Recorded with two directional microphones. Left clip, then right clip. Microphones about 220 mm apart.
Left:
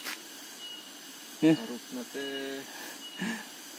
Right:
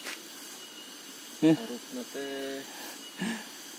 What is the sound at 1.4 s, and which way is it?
Speech, 5° right (ahead or behind).